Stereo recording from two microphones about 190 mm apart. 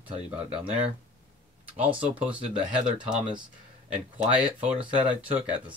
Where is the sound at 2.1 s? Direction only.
5° right (ahead or behind).